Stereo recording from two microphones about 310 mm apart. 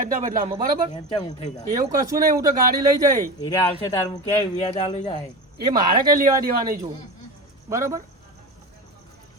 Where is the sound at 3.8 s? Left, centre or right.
Centre.